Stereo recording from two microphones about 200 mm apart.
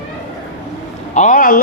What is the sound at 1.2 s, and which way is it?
Speech, 40° left (ahead or behind).